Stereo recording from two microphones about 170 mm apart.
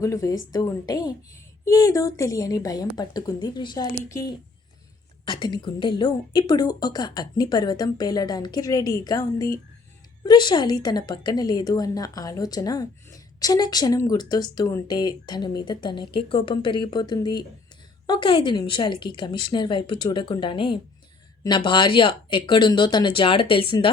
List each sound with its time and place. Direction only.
0.0 s a woman's voice: 20° left (ahead or behind)